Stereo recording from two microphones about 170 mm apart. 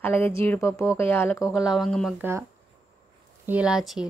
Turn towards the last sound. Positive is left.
turn(degrees=-5)  # may be behind; listen again after turning